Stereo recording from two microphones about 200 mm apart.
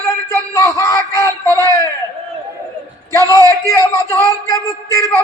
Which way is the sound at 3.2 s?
15° right (ahead or behind).